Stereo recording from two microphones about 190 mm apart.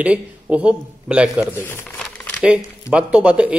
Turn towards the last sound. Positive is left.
turn(degrees=-5)  # may be behind; listen again after turning